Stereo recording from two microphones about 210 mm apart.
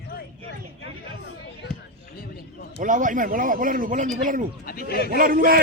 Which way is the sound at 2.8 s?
40° right (ahead or behind).